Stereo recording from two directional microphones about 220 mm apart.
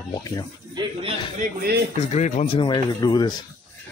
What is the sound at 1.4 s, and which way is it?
Speech, 40° right (ahead or behind).